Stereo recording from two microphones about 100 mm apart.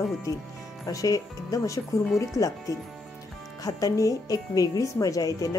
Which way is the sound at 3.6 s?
35° left (ahead or behind).